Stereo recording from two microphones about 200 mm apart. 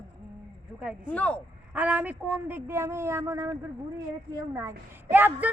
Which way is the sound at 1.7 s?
5° right (ahead or behind).